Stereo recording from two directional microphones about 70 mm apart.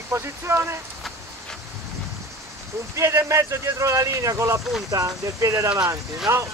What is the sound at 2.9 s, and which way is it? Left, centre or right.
Speech, right.